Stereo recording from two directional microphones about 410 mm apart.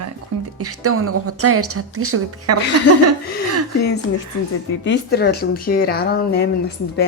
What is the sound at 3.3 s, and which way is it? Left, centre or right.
Speech, left.